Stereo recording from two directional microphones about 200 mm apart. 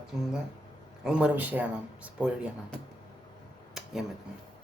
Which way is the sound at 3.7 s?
Centre (ahead or behind).